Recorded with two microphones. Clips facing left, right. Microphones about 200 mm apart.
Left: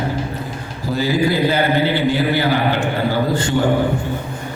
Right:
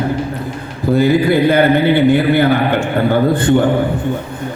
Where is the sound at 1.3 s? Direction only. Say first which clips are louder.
Right 6 dB; 55° right (ahead or behind).